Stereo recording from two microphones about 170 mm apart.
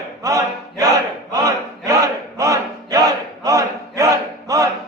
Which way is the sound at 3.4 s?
20° right (ahead or behind).